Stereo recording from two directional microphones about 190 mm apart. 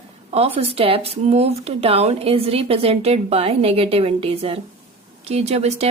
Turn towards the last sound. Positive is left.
turn(degrees=-35)  # may be behind; listen again after turning